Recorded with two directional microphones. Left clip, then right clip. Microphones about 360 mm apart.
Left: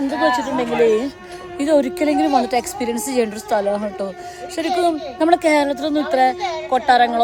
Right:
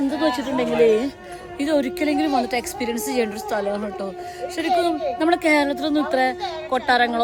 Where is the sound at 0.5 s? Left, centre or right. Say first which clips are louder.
Left 1 dB; centre.